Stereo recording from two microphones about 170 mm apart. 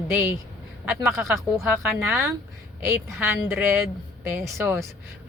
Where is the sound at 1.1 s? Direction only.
15° right (ahead or behind).